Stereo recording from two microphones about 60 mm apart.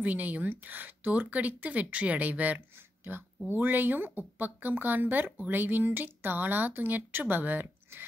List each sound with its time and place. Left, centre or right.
0.0 s a woman's voice: right
3.0 s a sound: right
3.4 s speech: right